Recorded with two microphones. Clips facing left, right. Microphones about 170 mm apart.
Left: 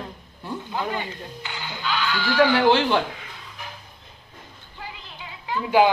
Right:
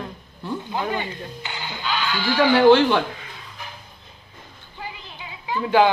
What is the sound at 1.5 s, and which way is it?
Speech, 20° right (ahead or behind).